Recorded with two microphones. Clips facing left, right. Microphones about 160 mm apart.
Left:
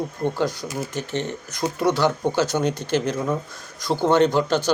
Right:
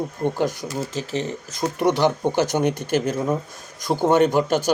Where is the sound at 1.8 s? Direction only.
15° right (ahead or behind).